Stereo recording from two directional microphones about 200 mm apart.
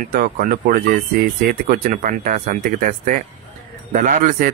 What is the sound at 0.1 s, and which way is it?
Speech, 45° right (ahead or behind).